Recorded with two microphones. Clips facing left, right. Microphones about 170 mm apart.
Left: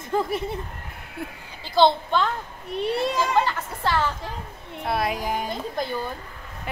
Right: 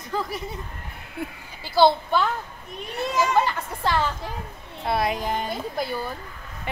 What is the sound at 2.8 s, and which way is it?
Speech, 35° left (ahead or behind).